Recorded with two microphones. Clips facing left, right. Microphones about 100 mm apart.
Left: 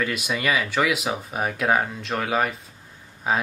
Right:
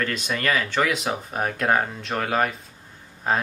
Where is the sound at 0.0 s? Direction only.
10° left (ahead or behind).